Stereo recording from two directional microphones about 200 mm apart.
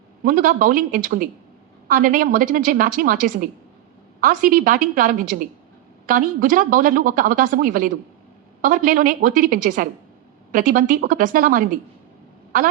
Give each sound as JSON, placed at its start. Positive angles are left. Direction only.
{"t": 0.3, "sound": "a woman's voice", "side_deg": -45}